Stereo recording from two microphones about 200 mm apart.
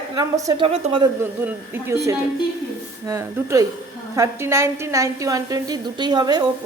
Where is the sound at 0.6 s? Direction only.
30° right (ahead or behind).